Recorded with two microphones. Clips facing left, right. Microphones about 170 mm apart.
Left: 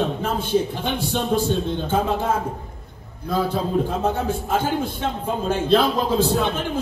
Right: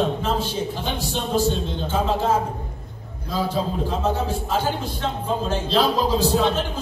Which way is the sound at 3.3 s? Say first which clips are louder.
Left 3 dB; 55° left (ahead or behind).